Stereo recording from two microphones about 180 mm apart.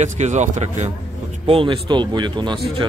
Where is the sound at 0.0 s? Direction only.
40° right (ahead or behind); by 2.6 s 25° right (ahead or behind).